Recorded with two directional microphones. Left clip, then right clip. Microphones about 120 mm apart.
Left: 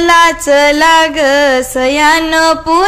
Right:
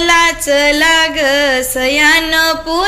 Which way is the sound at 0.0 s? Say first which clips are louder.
Left 3 dB; 60° left (ahead or behind).